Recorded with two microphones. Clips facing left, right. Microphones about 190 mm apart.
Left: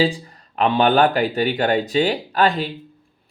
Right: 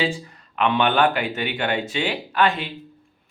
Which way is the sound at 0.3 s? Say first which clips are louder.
Left 2 dB; 35° left (ahead or behind).